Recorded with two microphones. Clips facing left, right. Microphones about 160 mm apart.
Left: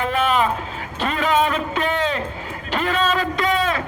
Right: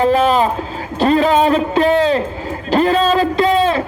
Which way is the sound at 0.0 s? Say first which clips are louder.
Right 7 dB; 35° right (ahead or behind).